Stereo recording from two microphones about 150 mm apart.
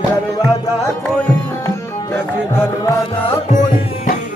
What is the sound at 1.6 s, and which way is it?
Tabla, 15° left (ahead or behind).